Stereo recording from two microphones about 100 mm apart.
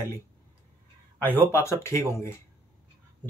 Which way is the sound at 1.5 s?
30° left (ahead or behind).